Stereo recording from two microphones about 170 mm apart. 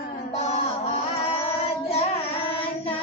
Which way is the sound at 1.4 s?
35° left (ahead or behind).